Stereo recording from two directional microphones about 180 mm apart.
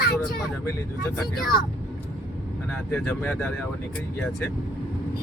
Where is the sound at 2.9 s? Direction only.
5° left (ahead or behind).